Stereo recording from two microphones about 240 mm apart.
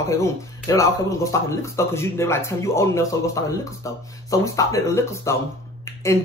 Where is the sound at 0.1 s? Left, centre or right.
Centre.